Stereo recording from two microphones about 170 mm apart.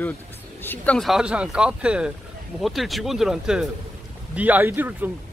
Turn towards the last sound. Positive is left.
turn(degrees=-10)  # may be behind; listen again after turning